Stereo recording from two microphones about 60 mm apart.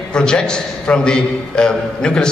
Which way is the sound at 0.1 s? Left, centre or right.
Centre.